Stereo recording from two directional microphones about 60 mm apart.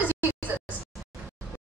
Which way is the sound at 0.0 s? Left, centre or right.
Right.